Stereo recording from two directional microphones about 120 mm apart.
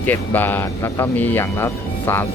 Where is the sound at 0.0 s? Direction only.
15° left (ahead or behind).